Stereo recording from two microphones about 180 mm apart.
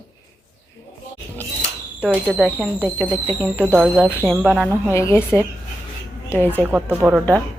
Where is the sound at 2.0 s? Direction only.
5° right (ahead or behind).